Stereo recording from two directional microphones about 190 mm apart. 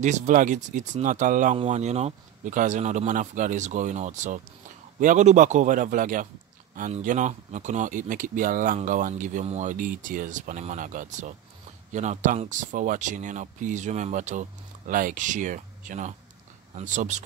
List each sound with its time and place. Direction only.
0.0 s speech: 40° right (ahead or behind)